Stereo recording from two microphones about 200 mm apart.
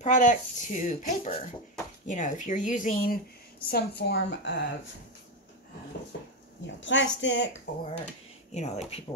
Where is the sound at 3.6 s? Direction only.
55° left (ahead or behind).